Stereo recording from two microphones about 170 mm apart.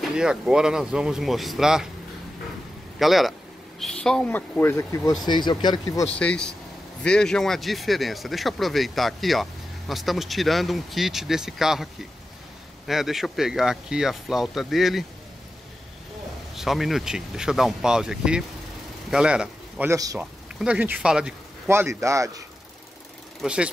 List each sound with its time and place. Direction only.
0.0 s speech: 5° right (ahead or behind)
3.0 s speech: centre (ahead or behind); by 6.0 s 25° left (ahead or behind)
6.1 s speech: 5° left (ahead or behind)
16.5 s a man's voice: centre (ahead or behind)
19.9 s a man's voice: 20° right (ahead or behind)
20.2 s speech: 5° right (ahead or behind)
21.6 s a man's voice: 15° right (ahead or behind)
23.4 s speech: 5° right (ahead or behind)